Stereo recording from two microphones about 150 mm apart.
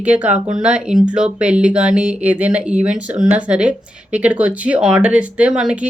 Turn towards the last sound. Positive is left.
turn(degrees=-5)  # may be behind; listen again after turning